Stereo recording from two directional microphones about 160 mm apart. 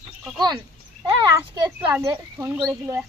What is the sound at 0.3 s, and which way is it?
Speech, 25° right (ahead or behind).